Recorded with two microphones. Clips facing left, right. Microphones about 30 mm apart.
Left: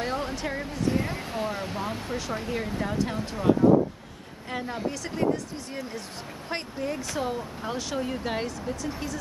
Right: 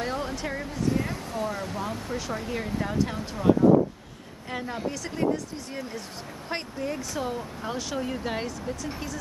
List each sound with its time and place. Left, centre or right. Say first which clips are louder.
0.0 s a sound: left 1 dB; centre
1.1 s speech: even; left
2.1 s speech: left 1 dB; centre